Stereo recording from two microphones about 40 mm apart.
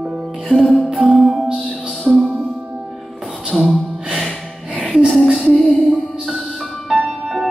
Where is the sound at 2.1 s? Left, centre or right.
Centre.